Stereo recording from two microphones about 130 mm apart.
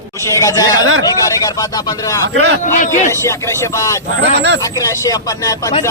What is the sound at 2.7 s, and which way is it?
Speech, 75° left (ahead or behind).